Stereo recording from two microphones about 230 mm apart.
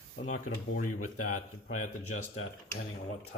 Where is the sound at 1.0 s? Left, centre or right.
Left.